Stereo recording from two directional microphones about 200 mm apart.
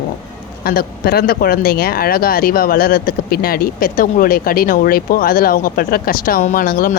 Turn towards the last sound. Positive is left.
turn(degrees=45)  # may be behind; listen again after turning